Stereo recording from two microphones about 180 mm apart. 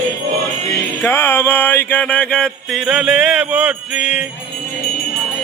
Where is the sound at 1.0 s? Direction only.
15° left (ahead or behind); by 4.2 s 5° right (ahead or behind).